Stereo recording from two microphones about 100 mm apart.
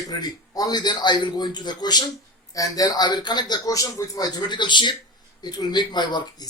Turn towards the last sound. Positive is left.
turn(degrees=45)  # may be behind; listen again after turning